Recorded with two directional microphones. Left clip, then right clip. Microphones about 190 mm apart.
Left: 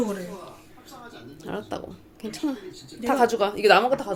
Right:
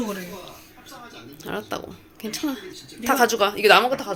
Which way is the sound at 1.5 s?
Centre (ahead or behind).